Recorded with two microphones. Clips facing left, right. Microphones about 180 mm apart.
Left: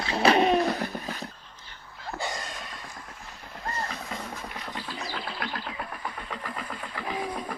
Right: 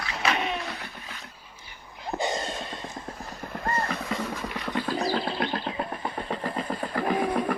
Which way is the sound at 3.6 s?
55° right (ahead or behind).